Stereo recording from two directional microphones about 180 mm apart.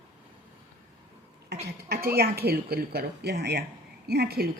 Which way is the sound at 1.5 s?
65° right (ahead or behind).